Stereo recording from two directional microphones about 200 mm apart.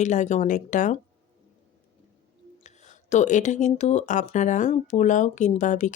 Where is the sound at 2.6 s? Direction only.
35° left (ahead or behind).